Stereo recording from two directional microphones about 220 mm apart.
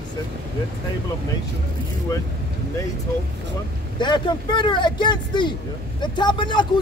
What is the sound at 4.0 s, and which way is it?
A man's voice, 20° left (ahead or behind).